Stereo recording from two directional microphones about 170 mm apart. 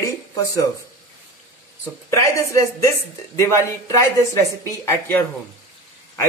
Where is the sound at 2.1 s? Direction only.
15° left (ahead or behind).